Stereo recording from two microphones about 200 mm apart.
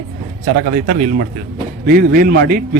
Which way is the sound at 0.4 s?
50° right (ahead or behind).